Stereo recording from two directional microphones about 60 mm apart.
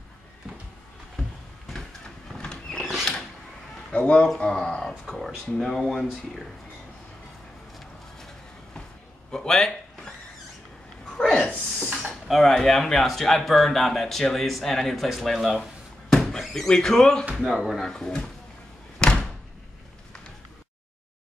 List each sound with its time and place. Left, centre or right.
2.3 s horse: centre
2.8 s a sound: centre
3.9 s speech: centre
9.3 s a sound: centre
12.1 s speech: centre
17.4 s speech: centre
17.8 s speech: centre
18.9 s door: centre